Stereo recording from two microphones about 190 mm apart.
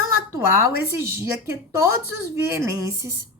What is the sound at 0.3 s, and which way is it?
A woman's voice, 15° right (ahead or behind).